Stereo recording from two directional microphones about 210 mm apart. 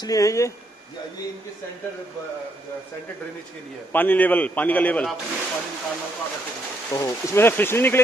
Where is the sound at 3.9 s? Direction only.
10° left (ahead or behind).